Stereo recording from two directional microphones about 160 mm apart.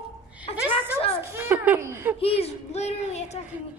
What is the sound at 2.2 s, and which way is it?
Speech, 40° left (ahead or behind).